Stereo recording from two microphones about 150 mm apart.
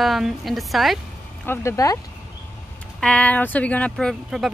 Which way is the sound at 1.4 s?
15° left (ahead or behind).